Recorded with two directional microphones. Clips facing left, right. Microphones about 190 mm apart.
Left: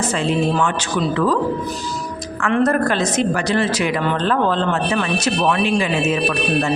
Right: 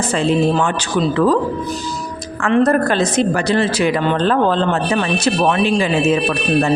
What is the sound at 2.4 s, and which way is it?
Speech, 30° right (ahead or behind).